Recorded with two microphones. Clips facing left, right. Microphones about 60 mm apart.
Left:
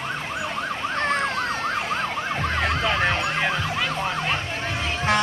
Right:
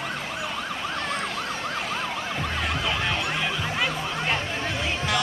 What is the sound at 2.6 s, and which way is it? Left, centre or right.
Emergency vehicle, left.